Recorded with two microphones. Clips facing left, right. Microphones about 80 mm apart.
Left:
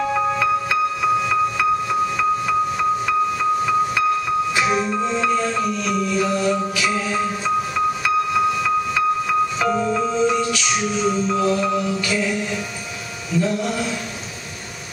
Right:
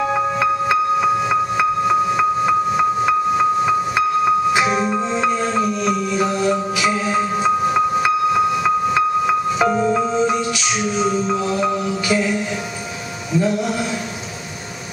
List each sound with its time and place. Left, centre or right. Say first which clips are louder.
0.1 s music: right 1 dB; right
9.6 s music: right 3 dB; centre
13.3 s a sound: right 2 dB; centre